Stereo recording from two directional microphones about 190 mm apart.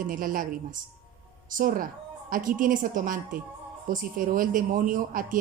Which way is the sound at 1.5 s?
45° right (ahead or behind).